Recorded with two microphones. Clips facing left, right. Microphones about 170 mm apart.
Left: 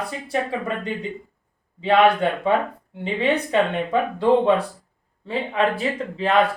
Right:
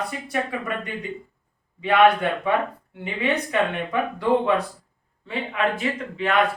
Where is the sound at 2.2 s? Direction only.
25° left (ahead or behind).